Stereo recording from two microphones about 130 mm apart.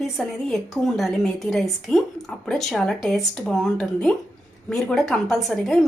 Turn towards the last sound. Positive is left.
turn(degrees=0)  # may be behind; listen again after turning